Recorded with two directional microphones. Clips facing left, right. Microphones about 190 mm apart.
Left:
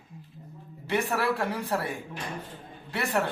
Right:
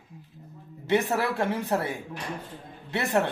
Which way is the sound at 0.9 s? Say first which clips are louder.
Right 2 dB; 20° right (ahead or behind).